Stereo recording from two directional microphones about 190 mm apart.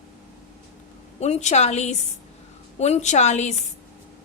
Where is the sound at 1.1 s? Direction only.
35° left (ahead or behind).